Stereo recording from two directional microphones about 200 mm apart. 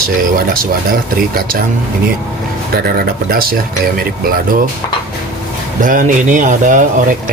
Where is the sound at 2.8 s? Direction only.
50° right (ahead or behind).